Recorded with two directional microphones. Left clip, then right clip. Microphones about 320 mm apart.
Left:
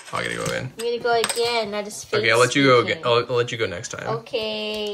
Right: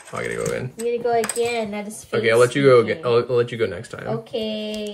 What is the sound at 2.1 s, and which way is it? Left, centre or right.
Speech, centre.